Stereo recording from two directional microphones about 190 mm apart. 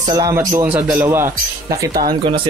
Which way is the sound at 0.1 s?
20° right (ahead or behind).